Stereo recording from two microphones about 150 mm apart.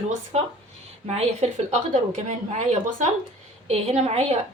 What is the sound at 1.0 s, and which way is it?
A woman's voice, 45° right (ahead or behind).